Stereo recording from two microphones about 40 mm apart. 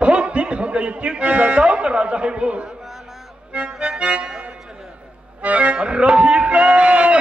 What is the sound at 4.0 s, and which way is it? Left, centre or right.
Accordion, right.